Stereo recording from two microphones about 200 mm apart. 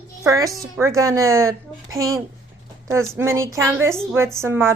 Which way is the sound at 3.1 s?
15° right (ahead or behind).